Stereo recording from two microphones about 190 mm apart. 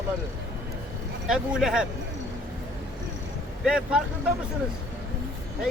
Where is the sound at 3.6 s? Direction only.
5° right (ahead or behind).